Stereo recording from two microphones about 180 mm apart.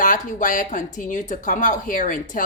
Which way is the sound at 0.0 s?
45° left (ahead or behind).